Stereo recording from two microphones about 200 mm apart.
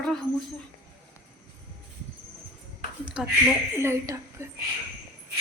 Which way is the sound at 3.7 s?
15° right (ahead or behind).